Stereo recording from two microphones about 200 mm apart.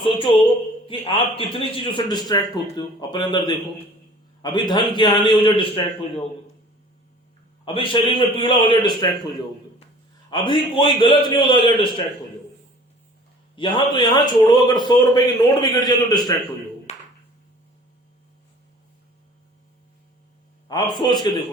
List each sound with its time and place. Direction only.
0.0 s a man's voice: 25° left (ahead or behind)
7.6 s a man's voice: 25° left (ahead or behind)
10.2 s a man's voice: 25° left (ahead or behind)
13.6 s a man's voice: 25° left (ahead or behind)
16.9 s a sound: 35° left (ahead or behind)
20.7 s a man's voice: 20° left (ahead or behind)